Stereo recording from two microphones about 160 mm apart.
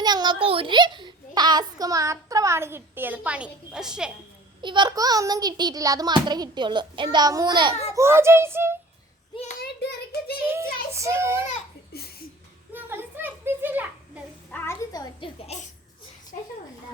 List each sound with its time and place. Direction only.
0.0 s a child's voice: 25° right (ahead or behind); by 4.1 s 5° right (ahead or behind)
4.6 s a child's voice: 30° right (ahead or behind)
7.9 s a child's voice: 15° right (ahead or behind)
9.3 s a child's voice: 45° left (ahead or behind)
9.6 s child singing: 80° left
10.4 s a child's voice: 15° right (ahead or behind)
12.7 s a sound: 15° right (ahead or behind)
14.5 s a sound: 15° left (ahead or behind)
15.5 s a child's voice: 40° left (ahead or behind)